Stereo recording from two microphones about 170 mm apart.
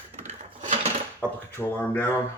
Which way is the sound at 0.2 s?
45° right (ahead or behind).